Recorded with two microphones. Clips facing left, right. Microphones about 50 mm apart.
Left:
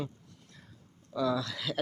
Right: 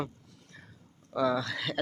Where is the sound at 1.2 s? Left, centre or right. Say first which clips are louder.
Right 2 dB; right.